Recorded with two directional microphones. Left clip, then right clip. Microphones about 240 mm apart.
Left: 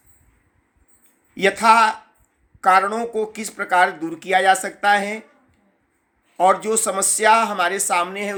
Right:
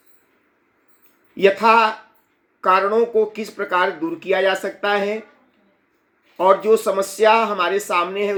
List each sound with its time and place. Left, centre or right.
1.4 s speech: centre
6.3 s speech: centre